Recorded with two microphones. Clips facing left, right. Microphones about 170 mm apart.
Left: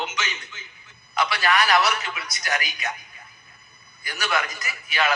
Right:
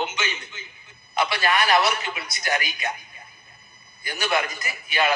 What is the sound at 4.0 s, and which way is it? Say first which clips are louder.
A man's voice: right 2 dB; 25° right (ahead or behind).